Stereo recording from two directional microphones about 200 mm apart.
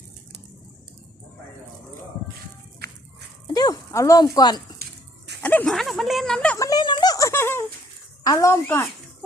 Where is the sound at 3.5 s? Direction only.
20° left (ahead or behind).